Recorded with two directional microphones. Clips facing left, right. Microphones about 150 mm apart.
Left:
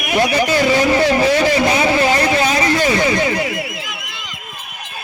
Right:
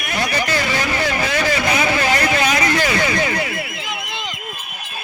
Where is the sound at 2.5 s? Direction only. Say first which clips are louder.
Left 3 dB; 25° left (ahead or behind).